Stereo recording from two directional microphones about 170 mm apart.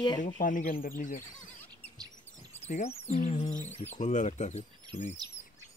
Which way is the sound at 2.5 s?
40° left (ahead or behind).